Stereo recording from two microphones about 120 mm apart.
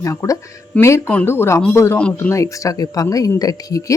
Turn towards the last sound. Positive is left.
turn(degrees=30)  # may be behind; listen again after turning